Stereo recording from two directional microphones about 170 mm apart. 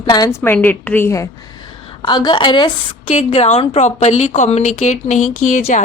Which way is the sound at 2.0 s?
25° left (ahead or behind).